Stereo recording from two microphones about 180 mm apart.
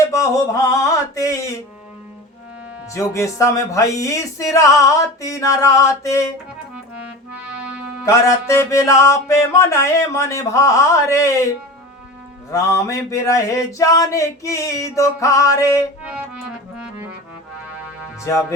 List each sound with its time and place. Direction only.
0.1 s music: 15° left (ahead or behind)
2.9 s music: 15° left (ahead or behind)
8.0 s music: 15° left (ahead or behind)
12.5 s music: 15° left (ahead or behind)
16.1 s music: 5° right (ahead or behind)